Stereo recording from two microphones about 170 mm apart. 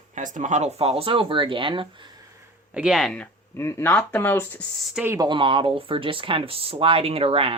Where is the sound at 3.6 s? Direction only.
15° left (ahead or behind).